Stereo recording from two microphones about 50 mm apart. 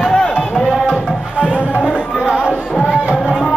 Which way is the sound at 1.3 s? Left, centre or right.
Right.